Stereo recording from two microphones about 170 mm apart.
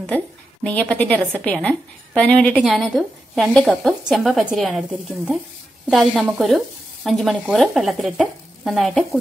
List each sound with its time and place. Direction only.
0.7 s a woman's voice: 10° left (ahead or behind)